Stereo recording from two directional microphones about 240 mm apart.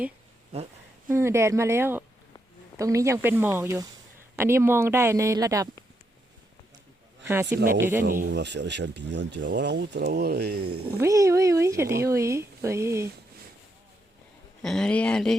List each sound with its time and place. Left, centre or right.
0.5 s a sound: right
1.1 s speech: centre
7.3 s speech: centre
8.0 s speech: right
10.9 s speech: centre
14.6 s speech: centre